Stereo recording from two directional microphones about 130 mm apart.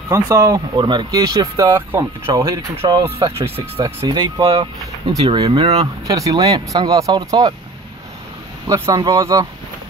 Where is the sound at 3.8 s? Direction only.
35° right (ahead or behind).